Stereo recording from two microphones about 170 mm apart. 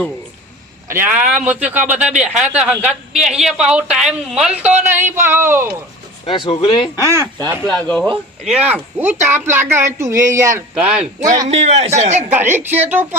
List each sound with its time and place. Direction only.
0.9 s a man's voice: 10° right (ahead or behind)
6.2 s speech: 30° left (ahead or behind)
7.6 s speech: 5° left (ahead or behind)
8.4 s a man's voice: 5° right (ahead or behind)
10.8 s speech: 5° right (ahead or behind)
11.0 s a man's voice: 45° right (ahead or behind)
12.3 s a man's voice: 10° right (ahead or behind)